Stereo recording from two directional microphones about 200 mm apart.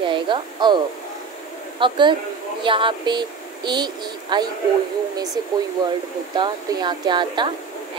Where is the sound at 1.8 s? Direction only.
25° right (ahead or behind).